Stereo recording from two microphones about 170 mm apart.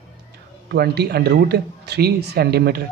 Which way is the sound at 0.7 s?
70° right (ahead or behind).